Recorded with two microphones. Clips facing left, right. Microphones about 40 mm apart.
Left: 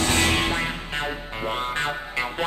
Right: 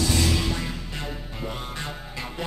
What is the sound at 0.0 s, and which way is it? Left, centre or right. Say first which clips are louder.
Music: left 3 dB; left.